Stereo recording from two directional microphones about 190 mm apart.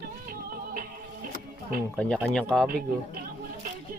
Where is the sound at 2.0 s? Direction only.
5° left (ahead or behind).